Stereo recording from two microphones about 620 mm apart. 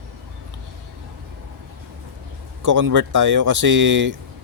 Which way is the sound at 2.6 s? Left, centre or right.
Right.